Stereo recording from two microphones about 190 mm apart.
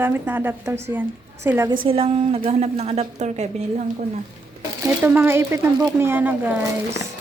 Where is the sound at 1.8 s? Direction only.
30° right (ahead or behind).